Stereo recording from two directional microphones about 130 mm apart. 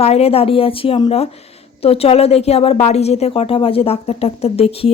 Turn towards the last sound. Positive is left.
turn(degrees=50)  # may be behind; listen again after turning